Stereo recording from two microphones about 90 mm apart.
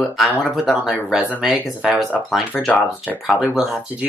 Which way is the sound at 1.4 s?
5° right (ahead or behind).